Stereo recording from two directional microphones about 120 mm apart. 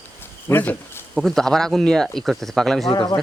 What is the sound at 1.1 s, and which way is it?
Speech, centre (ahead or behind).